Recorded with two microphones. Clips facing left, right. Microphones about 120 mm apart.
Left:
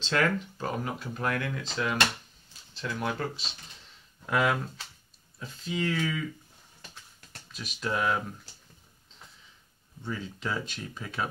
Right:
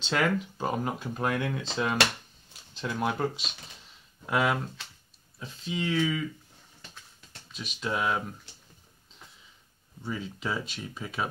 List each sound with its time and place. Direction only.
0.1 s speech: 15° right (ahead or behind)
4.3 s speech: 5° right (ahead or behind)
7.5 s speech: centre (ahead or behind)
10.0 s speech: 10° right (ahead or behind)